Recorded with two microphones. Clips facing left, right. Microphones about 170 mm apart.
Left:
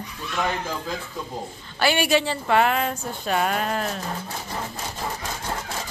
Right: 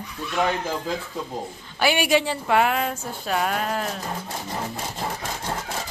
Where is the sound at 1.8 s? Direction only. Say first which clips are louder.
Even; 10° right (ahead or behind).